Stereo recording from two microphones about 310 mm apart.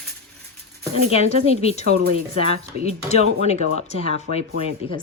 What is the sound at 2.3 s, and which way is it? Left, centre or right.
A woman's voice, centre.